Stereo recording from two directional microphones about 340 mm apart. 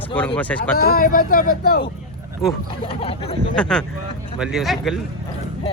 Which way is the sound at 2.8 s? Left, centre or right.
Centre.